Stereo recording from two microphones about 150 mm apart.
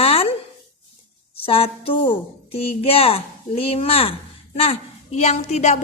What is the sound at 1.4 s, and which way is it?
Speech, 40° left (ahead or behind).